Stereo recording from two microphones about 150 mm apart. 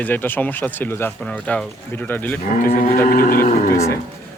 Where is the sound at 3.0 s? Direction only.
75° left (ahead or behind).